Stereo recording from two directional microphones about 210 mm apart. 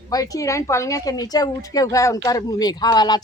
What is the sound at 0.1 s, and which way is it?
A woman's voice, 15° left (ahead or behind).